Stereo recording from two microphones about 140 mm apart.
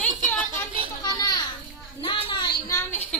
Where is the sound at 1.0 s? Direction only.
30° left (ahead or behind).